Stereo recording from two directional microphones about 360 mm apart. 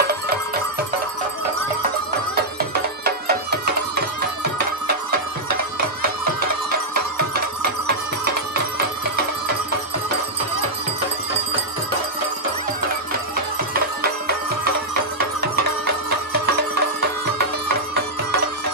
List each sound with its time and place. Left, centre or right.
3.0 s music: right
7.3 s music: right
14.0 s music: right